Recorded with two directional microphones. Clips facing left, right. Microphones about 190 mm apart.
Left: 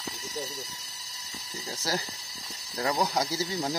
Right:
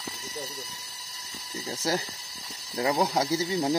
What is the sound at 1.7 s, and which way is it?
Speech, 20° right (ahead or behind).